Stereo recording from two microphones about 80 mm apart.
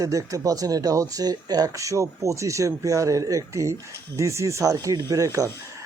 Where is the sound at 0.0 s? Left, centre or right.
Right.